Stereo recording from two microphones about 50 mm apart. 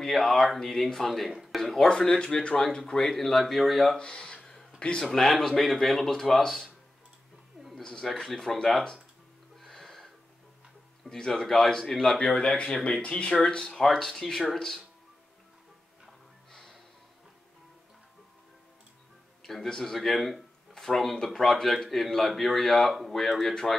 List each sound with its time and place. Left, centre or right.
0.0 s speech: centre
1.3 s a sound: centre
1.6 s a sound: centre
1.9 s speech: centre
3.9 s a sound: centre
4.7 s speech: centre
5.1 s speech: centre
7.7 s speech: centre
9.6 s music: centre
11.1 s speech: centre
12.2 s speech: centre
19.4 s speech: centre